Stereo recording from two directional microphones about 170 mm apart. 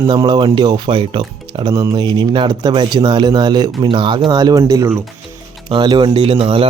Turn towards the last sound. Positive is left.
turn(degrees=-35)  # may be behind; listen again after turning